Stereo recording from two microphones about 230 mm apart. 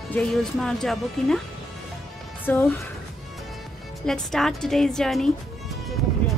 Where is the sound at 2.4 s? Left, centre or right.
Centre.